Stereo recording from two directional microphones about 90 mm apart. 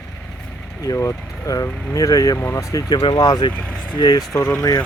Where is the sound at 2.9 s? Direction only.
60° left (ahead or behind).